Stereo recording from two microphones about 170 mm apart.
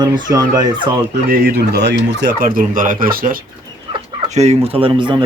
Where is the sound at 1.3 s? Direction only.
70° right (ahead or behind).